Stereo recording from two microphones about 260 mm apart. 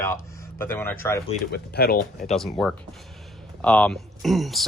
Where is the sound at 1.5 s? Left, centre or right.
Left.